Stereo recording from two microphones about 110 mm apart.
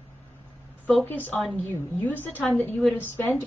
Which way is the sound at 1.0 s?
15° left (ahead or behind).